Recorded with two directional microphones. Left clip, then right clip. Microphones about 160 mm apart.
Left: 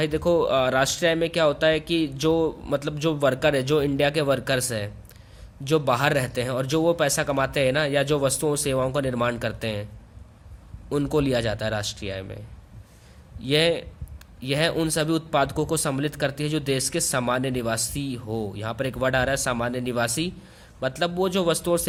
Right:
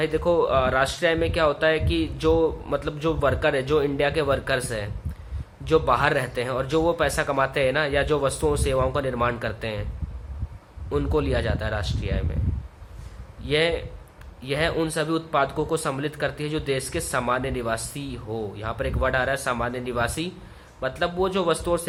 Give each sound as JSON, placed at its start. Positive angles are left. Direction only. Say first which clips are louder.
{"t": 0.0, "sound": "a man's voice", "louder": "even", "side_deg": 40}
{"t": 10.8, "sound": "speech", "louder": "left 1 dB", "side_deg": 45}
{"t": 13.4, "sound": "speech", "louder": "left 1 dB", "side_deg": 45}